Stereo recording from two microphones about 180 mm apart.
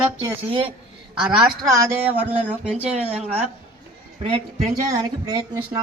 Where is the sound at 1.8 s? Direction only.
15° right (ahead or behind).